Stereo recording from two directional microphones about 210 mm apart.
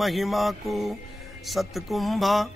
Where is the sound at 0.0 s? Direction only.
Centre (ahead or behind).